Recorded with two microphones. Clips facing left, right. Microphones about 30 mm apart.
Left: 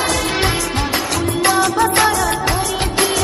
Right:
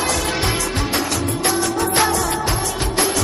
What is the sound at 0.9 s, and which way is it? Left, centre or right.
Music, left.